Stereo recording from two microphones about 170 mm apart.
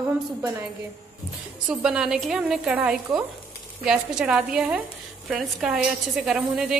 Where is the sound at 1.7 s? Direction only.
5° right (ahead or behind).